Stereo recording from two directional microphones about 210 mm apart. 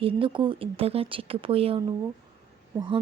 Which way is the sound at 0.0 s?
25° right (ahead or behind).